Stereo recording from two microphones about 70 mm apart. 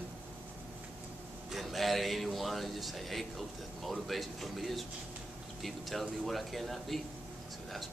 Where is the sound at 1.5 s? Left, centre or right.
Centre.